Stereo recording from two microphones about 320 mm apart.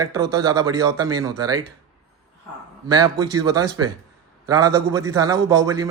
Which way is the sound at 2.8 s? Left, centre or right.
Centre.